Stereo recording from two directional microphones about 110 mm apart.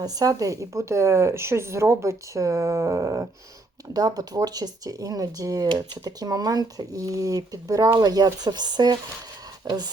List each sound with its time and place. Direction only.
0.0 s a woman's voice: 35° right (ahead or behind)